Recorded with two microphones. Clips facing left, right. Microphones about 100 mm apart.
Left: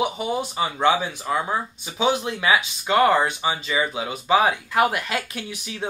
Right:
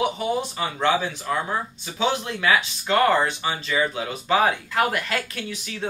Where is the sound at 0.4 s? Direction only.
15° left (ahead or behind).